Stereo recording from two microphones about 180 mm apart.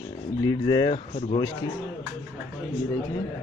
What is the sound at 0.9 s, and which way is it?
Speech, 35° left (ahead or behind).